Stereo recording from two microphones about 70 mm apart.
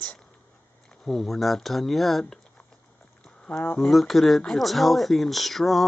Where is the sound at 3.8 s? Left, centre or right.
Centre.